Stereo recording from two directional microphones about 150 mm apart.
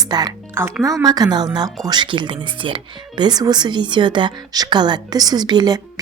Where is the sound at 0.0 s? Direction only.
25° right (ahead or behind).